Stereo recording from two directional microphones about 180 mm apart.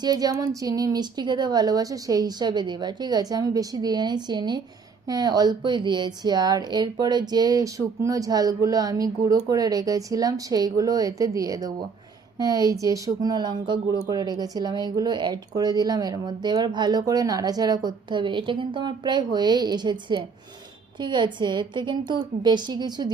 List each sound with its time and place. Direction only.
0.0 s speech: 20° right (ahead or behind)